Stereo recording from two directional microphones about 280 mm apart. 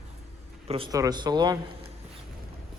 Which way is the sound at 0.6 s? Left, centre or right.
Centre.